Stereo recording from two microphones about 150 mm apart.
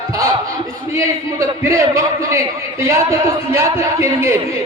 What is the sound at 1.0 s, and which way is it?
Speech, 20° right (ahead or behind).